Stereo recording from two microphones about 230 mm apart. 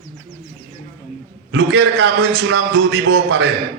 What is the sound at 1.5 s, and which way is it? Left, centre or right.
A man's voice, right.